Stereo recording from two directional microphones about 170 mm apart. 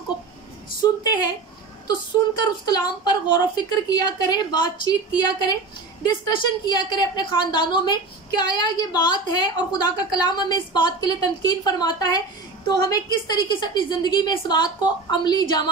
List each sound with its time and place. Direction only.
0.7 s a woman's voice: 25° left (ahead or behind)
2.6 s a woman's voice: 25° left (ahead or behind)